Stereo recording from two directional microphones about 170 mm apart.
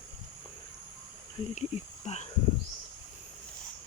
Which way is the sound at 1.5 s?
40° left (ahead or behind).